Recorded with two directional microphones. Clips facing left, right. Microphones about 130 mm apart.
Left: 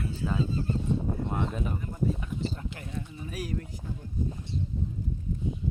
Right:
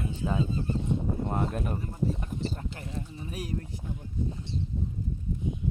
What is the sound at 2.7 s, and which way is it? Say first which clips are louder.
Speech: even; 30° right (ahead or behind).